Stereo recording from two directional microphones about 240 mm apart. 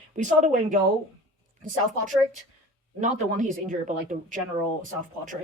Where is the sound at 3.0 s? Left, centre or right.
Right.